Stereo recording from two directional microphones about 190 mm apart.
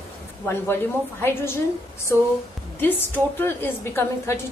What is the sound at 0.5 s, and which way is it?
A woman's voice, 10° left (ahead or behind).